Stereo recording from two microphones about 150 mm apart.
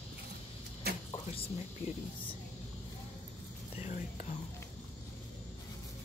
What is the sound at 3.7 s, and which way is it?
Speech, 50° left (ahead or behind).